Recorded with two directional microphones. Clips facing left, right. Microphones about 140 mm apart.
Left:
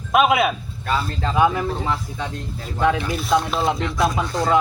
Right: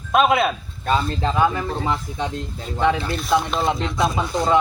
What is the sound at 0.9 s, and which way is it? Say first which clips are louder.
Speech: right 3 dB; 20° right (ahead or behind).